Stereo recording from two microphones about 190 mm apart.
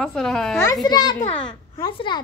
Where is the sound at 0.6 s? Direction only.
20° left (ahead or behind).